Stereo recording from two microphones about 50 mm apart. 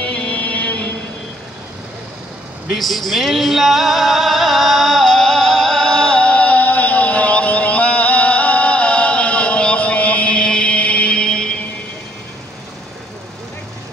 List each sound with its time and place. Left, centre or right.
0.0 s music: left
2.7 s music: centre; by 10.3 s left
10.3 s music: centre